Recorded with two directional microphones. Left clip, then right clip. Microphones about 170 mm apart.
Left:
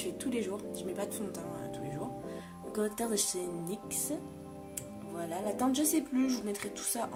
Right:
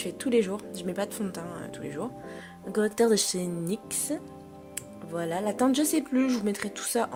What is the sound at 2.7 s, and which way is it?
A woman's voice, 40° right (ahead or behind).